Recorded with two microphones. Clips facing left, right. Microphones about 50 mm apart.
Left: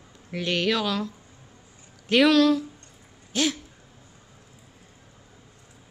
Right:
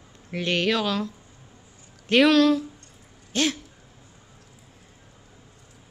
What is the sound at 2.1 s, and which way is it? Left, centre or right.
Speech, centre.